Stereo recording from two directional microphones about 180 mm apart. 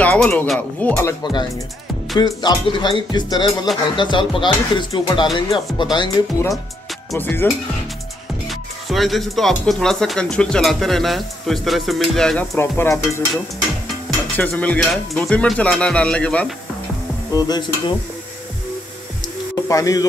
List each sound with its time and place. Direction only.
0.0 s a sound: 5° left (ahead or behind)
0.5 s speech: 10° left (ahead or behind)
1.2 s speech: 25° left (ahead or behind)
8.5 s speech: centre (ahead or behind)
12.5 s speech: 15° left (ahead or behind)
14.3 s speech: 10° left (ahead or behind)
17.3 s speech: 20° left (ahead or behind)
19.5 s speech: 20° left (ahead or behind)